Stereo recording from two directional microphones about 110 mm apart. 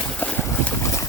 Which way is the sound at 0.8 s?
30° left (ahead or behind).